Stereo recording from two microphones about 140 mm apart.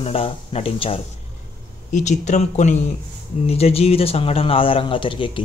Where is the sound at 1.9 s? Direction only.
60° left (ahead or behind).